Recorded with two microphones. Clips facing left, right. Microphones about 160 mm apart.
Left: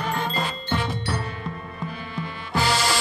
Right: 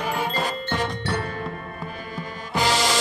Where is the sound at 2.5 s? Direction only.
20° right (ahead or behind).